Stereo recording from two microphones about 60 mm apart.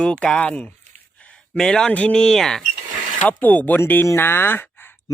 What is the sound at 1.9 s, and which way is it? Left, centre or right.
Speech, centre.